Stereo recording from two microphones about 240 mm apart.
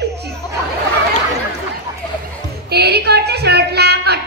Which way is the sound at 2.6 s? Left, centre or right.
Right.